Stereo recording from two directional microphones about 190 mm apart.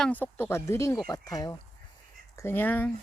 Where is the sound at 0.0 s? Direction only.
10° left (ahead or behind).